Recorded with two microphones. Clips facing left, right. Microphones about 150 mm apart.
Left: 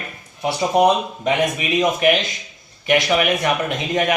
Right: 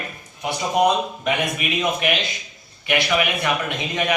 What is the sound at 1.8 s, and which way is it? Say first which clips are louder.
A man's voice: left 6 dB; 40° left (ahead or behind).